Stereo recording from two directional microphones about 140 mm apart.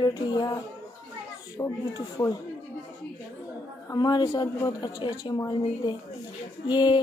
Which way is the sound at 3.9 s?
30° left (ahead or behind).